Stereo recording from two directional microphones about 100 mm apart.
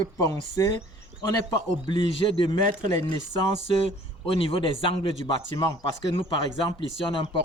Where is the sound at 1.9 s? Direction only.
60° left (ahead or behind).